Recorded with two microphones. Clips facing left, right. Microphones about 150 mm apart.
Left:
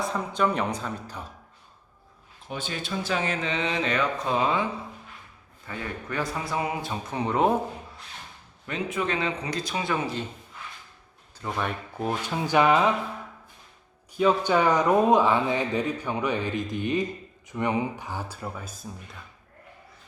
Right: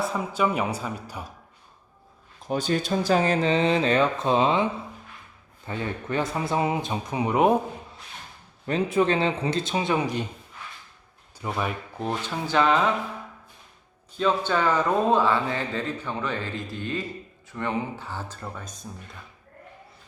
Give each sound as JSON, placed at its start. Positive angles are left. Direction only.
{"t": 0.0, "sound": "speech", "side_deg": -5}
{"t": 2.5, "sound": "speech", "side_deg": -40}
{"t": 8.6, "sound": "speech", "side_deg": -35}
{"t": 11.3, "sound": "speech", "side_deg": -10}
{"t": 11.9, "sound": "speech", "side_deg": 10}
{"t": 14.1, "sound": "speech", "side_deg": 10}